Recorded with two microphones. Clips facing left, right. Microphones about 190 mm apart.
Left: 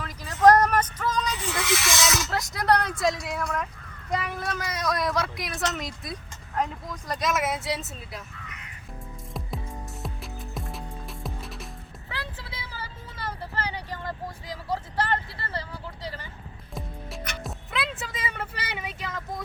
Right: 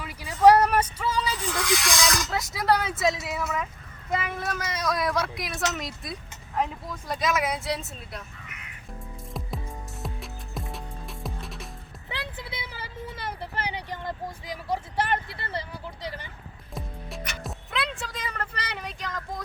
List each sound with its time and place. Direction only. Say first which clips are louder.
0.0 s a sound: right 1 dB; 10° right (ahead or behind)
1.4 s a sound: right 1 dB; 5° left (ahead or behind)
4.1 s a woman's voice: even; centre (ahead or behind)
10.0 s music: even; centre (ahead or behind)
12.0 s vehicle: right 2 dB; 20° right (ahead or behind)
16.7 s music: even; centre (ahead or behind)